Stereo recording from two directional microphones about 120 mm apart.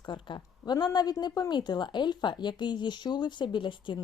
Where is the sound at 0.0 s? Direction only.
40° left (ahead or behind).